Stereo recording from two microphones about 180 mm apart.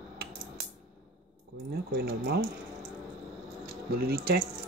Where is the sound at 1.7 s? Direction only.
60° right (ahead or behind).